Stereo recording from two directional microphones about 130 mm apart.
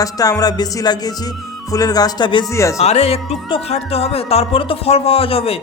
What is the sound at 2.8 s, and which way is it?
Speech, 55° left (ahead or behind).